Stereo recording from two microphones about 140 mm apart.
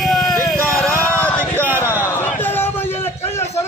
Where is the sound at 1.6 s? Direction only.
15° right (ahead or behind).